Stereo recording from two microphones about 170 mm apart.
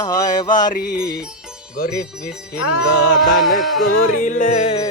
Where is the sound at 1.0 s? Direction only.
5° right (ahead or behind).